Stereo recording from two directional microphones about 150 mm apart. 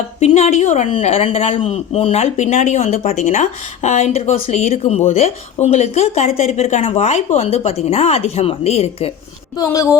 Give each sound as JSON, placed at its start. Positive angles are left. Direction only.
{"t": 0.2, "sound": "a woman's voice", "side_deg": 45}
{"t": 9.6, "sound": "speech", "side_deg": 20}